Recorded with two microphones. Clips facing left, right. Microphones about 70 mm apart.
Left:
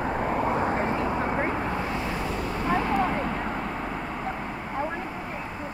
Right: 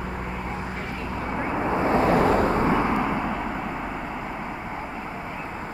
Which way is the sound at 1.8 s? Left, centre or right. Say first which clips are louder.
Right 10 dB; right.